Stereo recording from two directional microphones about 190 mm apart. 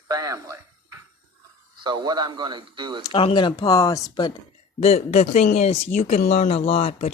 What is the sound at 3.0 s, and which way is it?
Speech, 25° left (ahead or behind).